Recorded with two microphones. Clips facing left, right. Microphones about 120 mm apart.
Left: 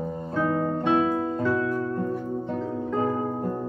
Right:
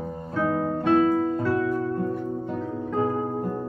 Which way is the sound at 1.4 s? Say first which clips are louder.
Even; 10° right (ahead or behind).